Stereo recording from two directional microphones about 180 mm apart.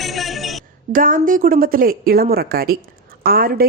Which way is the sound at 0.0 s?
Centre (ahead or behind).